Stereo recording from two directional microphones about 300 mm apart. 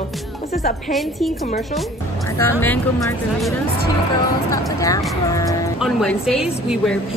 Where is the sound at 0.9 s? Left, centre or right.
Centre.